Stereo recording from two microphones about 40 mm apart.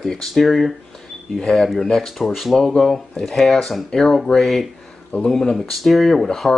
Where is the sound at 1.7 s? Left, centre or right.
Centre.